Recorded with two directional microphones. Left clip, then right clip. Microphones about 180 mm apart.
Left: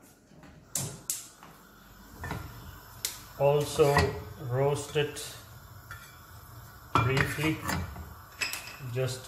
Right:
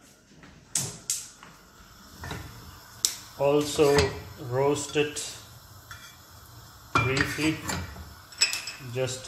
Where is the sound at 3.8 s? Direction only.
35° right (ahead or behind).